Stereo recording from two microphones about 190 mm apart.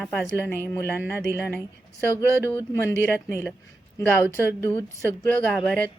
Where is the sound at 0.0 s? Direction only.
5° left (ahead or behind).